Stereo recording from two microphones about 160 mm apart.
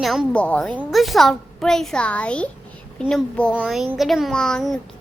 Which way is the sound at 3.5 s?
5° right (ahead or behind).